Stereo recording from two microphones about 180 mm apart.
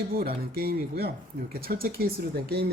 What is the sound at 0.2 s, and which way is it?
Speech, 60° right (ahead or behind).